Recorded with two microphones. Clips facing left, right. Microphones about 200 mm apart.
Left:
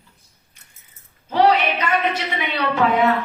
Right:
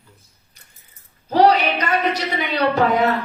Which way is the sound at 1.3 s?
40° right (ahead or behind).